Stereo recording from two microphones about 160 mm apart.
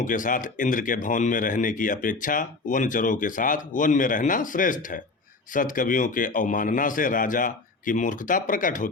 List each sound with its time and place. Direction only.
0.0 s speech: 55° left (ahead or behind)